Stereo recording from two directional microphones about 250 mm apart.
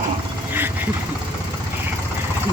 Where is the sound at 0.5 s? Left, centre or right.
Centre.